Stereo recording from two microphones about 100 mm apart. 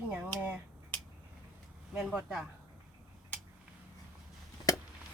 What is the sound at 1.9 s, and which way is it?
Speech, 5° right (ahead or behind).